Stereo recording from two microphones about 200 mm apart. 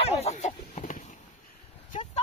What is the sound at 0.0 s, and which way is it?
Chicken, 30° left (ahead or behind).